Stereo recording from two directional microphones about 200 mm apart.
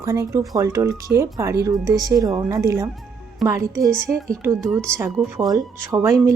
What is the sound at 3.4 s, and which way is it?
Speech, centre (ahead or behind).